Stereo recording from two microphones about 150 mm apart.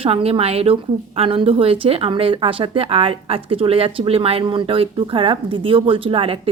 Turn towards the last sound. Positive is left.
turn(degrees=-35)  # may be behind; listen again after turning